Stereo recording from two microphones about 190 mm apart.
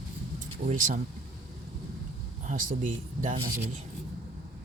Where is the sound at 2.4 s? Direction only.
40° right (ahead or behind).